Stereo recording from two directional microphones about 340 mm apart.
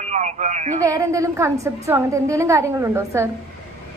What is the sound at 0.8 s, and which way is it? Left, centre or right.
A woman's voice, centre.